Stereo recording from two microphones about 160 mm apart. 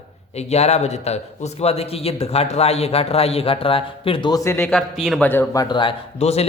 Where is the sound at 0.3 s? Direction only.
40° left (ahead or behind); by 4.6 s 20° left (ahead or behind).